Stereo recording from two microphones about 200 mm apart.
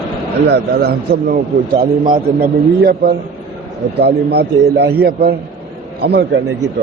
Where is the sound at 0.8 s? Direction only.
50° right (ahead or behind).